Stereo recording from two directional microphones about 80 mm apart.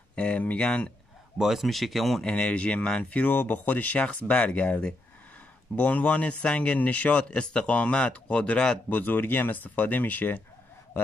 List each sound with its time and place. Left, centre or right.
0.1 s speech: centre
1.4 s speech: centre
2.2 s a man's voice: centre
8.8 s speech: left